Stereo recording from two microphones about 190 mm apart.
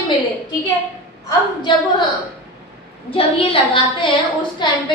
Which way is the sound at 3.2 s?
25° left (ahead or behind).